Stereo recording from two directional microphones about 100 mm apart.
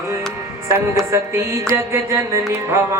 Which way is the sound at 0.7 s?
30° right (ahead or behind).